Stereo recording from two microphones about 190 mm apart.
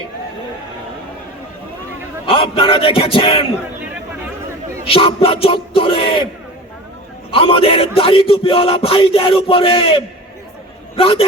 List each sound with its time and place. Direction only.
2.2 s a man's voice: 30° left (ahead or behind)
4.9 s a man's voice: 30° left (ahead or behind)
7.3 s a man's voice: 30° left (ahead or behind)